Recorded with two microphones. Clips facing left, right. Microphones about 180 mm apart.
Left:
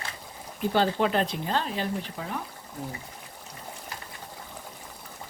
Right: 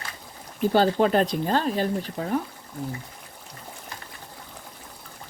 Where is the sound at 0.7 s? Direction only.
40° right (ahead or behind).